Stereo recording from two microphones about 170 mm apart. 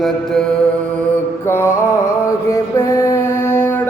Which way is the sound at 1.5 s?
15° left (ahead or behind).